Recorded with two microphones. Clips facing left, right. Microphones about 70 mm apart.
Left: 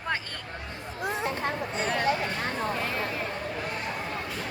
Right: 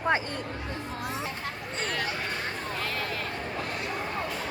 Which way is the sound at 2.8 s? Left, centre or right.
Left.